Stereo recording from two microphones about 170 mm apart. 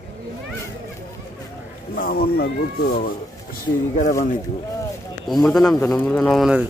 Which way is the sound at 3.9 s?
50° left (ahead or behind).